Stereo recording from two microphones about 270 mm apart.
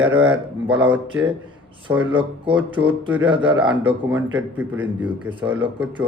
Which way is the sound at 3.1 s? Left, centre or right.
Centre.